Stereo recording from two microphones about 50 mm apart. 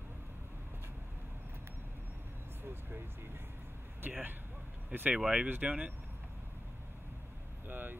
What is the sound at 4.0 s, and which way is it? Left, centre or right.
Speech, right.